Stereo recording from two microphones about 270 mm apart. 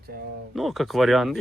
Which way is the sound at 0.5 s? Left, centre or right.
Centre.